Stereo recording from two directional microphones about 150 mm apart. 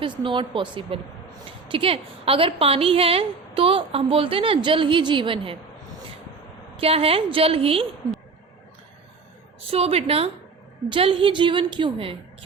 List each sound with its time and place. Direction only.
0.0 s a woman's voice: 35° right (ahead or behind)
6.7 s a woman's voice: 40° right (ahead or behind)
9.6 s a woman's voice: 40° right (ahead or behind)